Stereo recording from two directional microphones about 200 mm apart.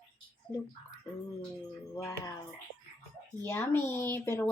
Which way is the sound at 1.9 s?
20° left (ahead or behind).